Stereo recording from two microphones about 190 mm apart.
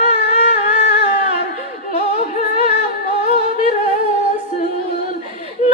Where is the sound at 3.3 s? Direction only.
40° left (ahead or behind).